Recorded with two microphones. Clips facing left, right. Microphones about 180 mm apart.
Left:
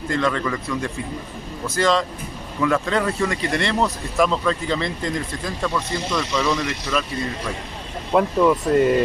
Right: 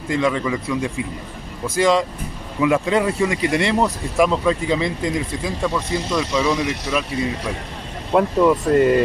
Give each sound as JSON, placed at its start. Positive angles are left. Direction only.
{"t": 0.1, "sound": "speech", "side_deg": -10}
{"t": 8.1, "sound": "speech", "side_deg": -5}